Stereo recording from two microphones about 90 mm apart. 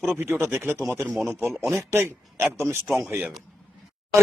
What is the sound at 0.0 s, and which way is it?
Speech, 25° right (ahead or behind).